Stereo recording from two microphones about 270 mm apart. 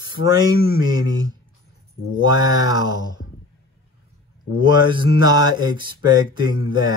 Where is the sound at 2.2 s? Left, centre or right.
Centre.